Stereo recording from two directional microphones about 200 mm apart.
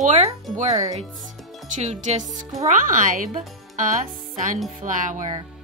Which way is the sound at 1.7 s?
35° right (ahead or behind).